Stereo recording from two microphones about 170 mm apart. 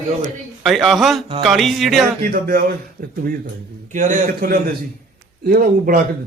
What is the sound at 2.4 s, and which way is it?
Speech, 60° right (ahead or behind).